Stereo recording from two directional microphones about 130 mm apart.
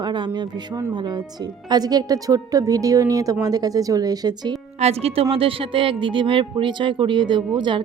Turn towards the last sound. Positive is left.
turn(degrees=-35)  # may be behind; listen again after turning